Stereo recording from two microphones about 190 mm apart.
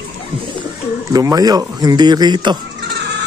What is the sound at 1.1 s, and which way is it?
Speech, 20° right (ahead or behind).